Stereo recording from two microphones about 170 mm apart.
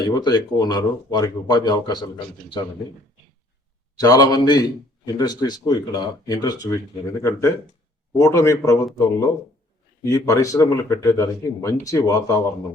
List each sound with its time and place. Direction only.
0.0 s speech: 25° left (ahead or behind)
3.9 s a man's voice: 20° left (ahead or behind)
10.0 s speech: 20° left (ahead or behind)